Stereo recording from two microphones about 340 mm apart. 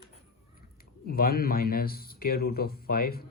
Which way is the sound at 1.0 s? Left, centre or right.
Left.